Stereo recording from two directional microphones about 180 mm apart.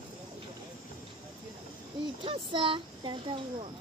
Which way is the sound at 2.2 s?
30° right (ahead or behind).